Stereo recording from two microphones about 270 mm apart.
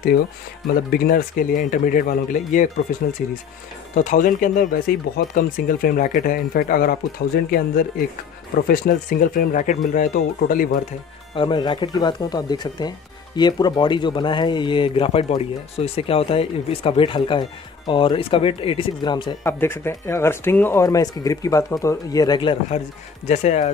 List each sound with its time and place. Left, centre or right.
0.9 s speech: left
3.9 s speech: left
11.3 s speech: centre